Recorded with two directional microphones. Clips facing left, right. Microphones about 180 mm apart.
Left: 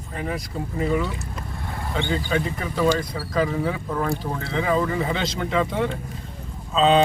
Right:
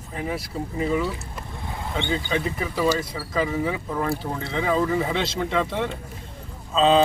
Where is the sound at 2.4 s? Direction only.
5° right (ahead or behind).